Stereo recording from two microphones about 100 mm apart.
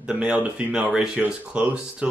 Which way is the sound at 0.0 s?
10° right (ahead or behind).